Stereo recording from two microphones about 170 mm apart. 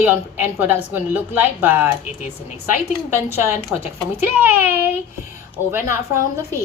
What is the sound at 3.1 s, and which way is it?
A woman's voice, 15° right (ahead or behind).